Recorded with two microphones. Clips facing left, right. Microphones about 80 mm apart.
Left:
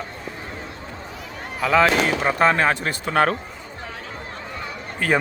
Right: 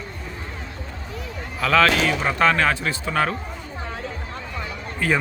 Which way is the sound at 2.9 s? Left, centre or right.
Left.